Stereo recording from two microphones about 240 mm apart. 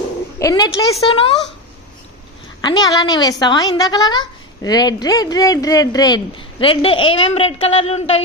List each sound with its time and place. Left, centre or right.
0.4 s a woman's voice: centre
2.6 s a woman's voice: centre